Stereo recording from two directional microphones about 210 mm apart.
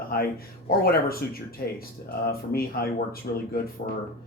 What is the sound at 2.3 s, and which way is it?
Speech, 45° left (ahead or behind).